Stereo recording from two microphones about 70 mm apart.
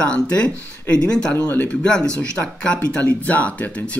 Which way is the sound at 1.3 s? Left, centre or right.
Left.